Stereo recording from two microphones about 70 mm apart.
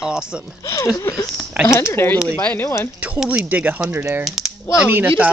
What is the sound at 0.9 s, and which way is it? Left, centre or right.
Speech, left.